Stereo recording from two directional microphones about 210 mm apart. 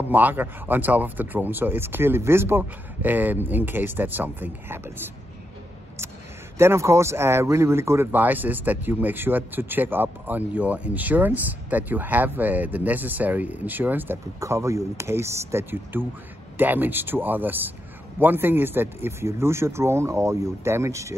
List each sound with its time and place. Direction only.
0.1 s speech: 10° right (ahead or behind)
6.6 s speech: 10° right (ahead or behind)